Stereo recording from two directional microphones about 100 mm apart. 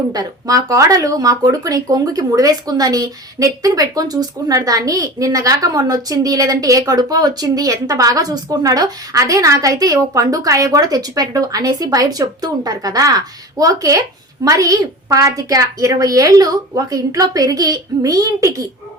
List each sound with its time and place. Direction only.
0.1 s speech: 40° right (ahead or behind)